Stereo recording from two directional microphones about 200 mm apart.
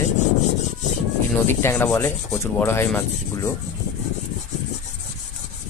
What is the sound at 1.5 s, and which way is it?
Speech, 10° left (ahead or behind).